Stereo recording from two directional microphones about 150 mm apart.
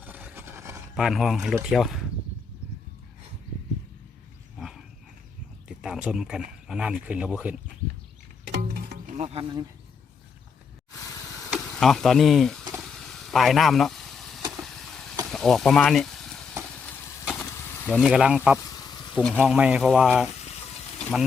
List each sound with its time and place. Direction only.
0.0 s a sound: 10° right (ahead or behind)
0.9 s speech: centre (ahead or behind)
4.5 s dog: centre (ahead or behind)
5.6 s speech: 5° right (ahead or behind)
8.5 s music: 90° right
9.1 s speech: 50° right (ahead or behind)
11.5 s speech: 5° left (ahead or behind)
13.1 s vehicle: centre (ahead or behind)
15.3 s a sound: 5° left (ahead or behind)
17.9 s speech: 5° right (ahead or behind)
19.1 s speech: 5° left (ahead or behind)
19.4 s speech: 5° right (ahead or behind)